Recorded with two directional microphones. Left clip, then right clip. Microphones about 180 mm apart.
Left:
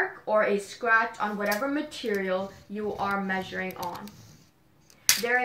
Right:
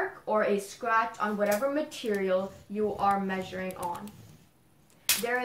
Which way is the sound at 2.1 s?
45° left (ahead or behind).